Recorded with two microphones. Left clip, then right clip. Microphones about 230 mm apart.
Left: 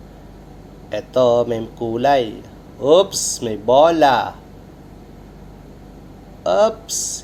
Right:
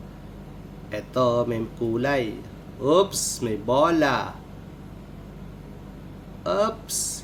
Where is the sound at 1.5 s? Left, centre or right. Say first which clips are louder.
Left 4 dB; centre.